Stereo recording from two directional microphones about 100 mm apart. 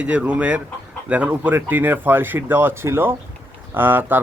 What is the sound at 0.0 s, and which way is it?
Speech, 10° right (ahead or behind).